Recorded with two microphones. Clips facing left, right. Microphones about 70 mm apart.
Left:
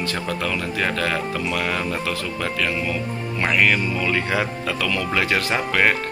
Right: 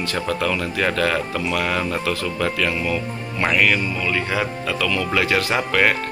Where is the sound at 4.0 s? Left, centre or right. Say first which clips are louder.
Even; left; by 5.9 s centre.